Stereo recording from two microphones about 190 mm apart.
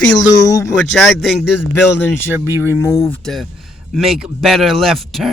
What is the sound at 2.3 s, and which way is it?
Speech, 10° right (ahead or behind).